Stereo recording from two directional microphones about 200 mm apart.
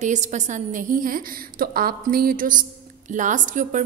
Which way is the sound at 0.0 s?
35° right (ahead or behind).